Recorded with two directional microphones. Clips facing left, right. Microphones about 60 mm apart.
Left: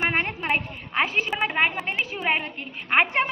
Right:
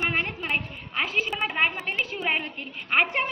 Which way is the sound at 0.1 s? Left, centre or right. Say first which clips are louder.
Left 2 dB; left.